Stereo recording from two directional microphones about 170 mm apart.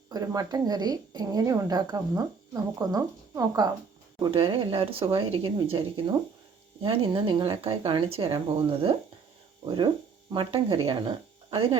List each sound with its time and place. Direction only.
0.1 s a woman's voice: 20° right (ahead or behind)
4.2 s speech: 30° right (ahead or behind)
6.8 s a woman's voice: 30° right (ahead or behind)